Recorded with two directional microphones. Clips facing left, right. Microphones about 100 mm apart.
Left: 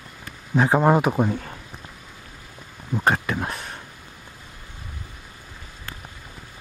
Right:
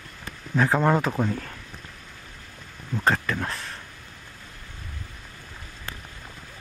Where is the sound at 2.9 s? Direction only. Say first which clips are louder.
Left 2 dB; 15° left (ahead or behind).